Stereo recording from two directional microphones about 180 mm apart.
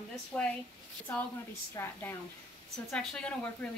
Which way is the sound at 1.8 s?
15° left (ahead or behind).